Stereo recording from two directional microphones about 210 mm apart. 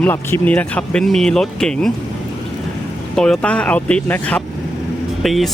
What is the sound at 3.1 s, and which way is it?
Speech, 5° left (ahead or behind).